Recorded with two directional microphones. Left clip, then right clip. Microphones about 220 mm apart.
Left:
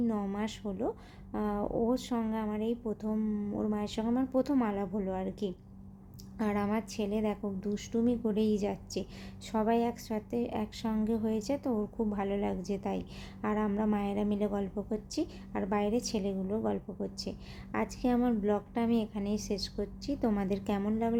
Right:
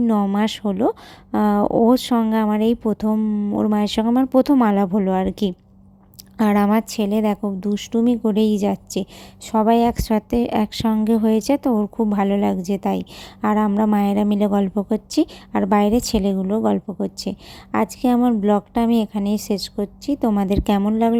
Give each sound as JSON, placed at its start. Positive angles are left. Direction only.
{"t": 0.0, "sound": "a woman's voice", "side_deg": -40}